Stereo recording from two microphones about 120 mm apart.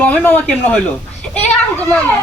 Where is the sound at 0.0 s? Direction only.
10° left (ahead or behind).